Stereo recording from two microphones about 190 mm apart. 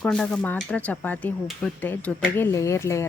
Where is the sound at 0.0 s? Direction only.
5° left (ahead or behind).